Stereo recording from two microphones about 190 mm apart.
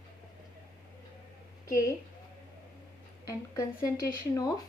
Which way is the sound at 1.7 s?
15° left (ahead or behind).